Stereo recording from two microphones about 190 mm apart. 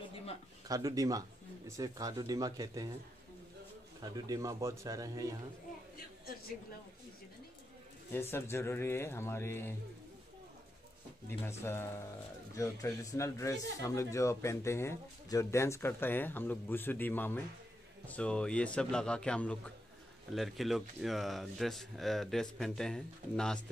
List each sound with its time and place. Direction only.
0.7 s speech: 20° right (ahead or behind)
4.0 s speech: 20° right (ahead or behind)
8.3 s speech: 15° left (ahead or behind)
11.2 s a man's voice: 10° left (ahead or behind)